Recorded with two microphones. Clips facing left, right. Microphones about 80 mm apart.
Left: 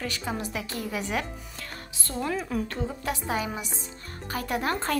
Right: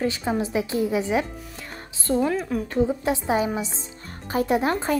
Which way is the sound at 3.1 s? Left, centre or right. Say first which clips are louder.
Right 7 dB; right.